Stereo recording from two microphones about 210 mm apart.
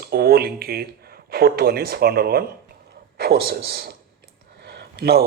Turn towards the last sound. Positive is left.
turn(degrees=-50)  # may be behind; listen again after turning